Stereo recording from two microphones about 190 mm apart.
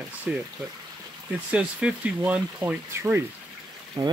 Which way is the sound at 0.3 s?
5° right (ahead or behind).